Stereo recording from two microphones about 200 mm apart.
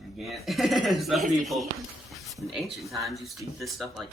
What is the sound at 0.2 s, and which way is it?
Speech, centre (ahead or behind).